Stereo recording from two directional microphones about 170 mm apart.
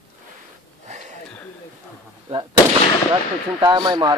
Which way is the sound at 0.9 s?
45° right (ahead or behind).